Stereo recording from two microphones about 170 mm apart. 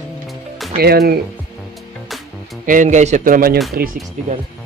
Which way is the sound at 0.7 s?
65° right (ahead or behind).